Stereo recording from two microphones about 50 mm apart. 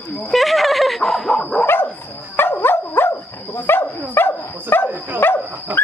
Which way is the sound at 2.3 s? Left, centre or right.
Left.